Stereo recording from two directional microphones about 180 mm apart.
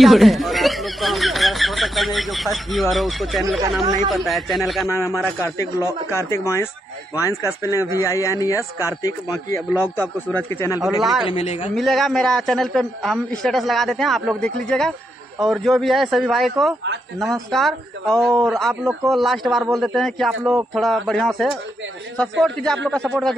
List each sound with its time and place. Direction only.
0.0 s a man's voice: centre (ahead or behind)
4.8 s a man's voice: 15° left (ahead or behind)
11.0 s a man's voice: centre (ahead or behind)
11.2 s a man's voice: 35° left (ahead or behind)
11.7 s a man's voice: centre (ahead or behind)